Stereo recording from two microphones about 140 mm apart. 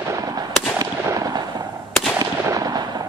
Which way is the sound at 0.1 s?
25° right (ahead or behind).